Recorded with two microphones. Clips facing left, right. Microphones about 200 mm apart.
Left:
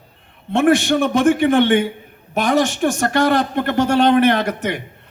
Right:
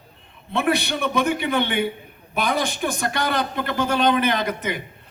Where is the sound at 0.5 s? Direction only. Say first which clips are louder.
Left 8 dB; 50° left (ahead or behind).